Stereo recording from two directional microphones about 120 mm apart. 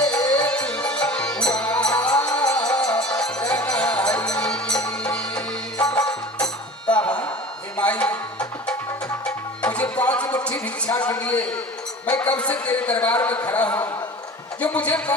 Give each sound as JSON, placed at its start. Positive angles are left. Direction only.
{"t": 0.0, "sound": "music", "side_deg": 5}
{"t": 2.4, "sound": "music", "side_deg": 30}
{"t": 2.7, "sound": "music", "side_deg": 10}
{"t": 9.6, "sound": "music", "side_deg": 10}
{"t": 10.8, "sound": "a sound", "side_deg": 10}
{"t": 12.2, "sound": "a man's voice", "side_deg": 10}